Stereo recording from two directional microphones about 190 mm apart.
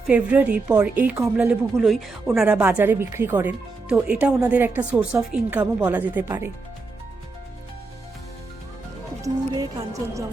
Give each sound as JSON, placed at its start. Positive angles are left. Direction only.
{"t": 0.1, "sound": "a woman's voice", "side_deg": -5}
{"t": 9.2, "sound": "speech", "side_deg": -20}